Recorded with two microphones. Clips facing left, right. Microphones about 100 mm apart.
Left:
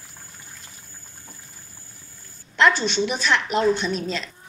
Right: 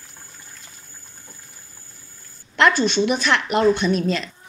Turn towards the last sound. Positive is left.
turn(degrees=-60)  # may be behind; listen again after turning